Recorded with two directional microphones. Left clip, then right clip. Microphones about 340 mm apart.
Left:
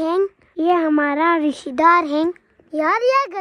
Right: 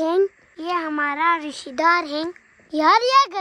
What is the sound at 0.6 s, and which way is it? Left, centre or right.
A child's voice, centre.